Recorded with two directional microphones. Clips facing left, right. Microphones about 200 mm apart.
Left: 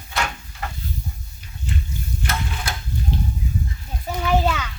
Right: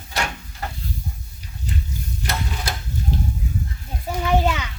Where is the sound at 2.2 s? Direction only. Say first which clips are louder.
Even; 40° right (ahead or behind).